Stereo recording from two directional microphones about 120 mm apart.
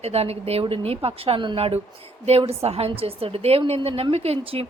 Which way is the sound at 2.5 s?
60° right (ahead or behind).